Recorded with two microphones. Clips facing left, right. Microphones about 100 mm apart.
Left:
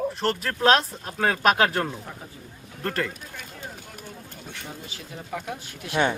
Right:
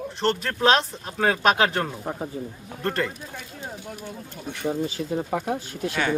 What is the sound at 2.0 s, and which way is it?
Speech, 45° right (ahead or behind).